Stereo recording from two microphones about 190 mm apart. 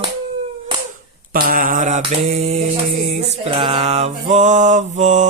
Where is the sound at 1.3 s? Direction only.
50° right (ahead or behind).